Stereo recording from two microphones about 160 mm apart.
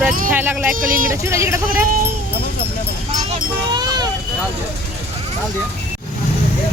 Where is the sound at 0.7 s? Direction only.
60° right (ahead or behind).